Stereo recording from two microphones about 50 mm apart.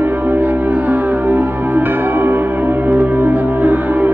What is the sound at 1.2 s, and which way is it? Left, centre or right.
Music, right.